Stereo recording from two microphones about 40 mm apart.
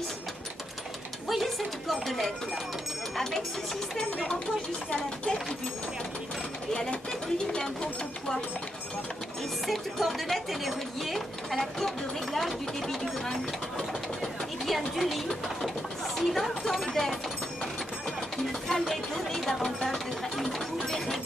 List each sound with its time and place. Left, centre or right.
1.3 s speech: centre
4.9 s speech: centre
6.7 s speech: centre
9.7 s speech: centre
18.5 s music: centre